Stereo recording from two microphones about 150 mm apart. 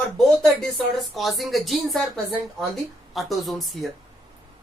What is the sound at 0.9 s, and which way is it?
Speech, centre (ahead or behind).